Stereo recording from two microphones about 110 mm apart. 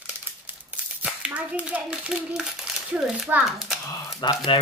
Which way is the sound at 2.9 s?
5° right (ahead or behind).